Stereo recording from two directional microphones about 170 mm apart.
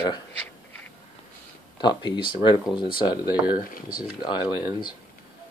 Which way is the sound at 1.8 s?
25° left (ahead or behind).